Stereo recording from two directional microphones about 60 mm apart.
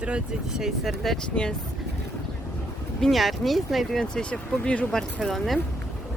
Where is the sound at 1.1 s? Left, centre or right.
Centre.